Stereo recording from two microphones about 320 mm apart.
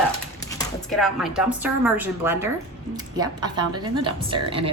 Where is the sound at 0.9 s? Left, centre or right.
Centre.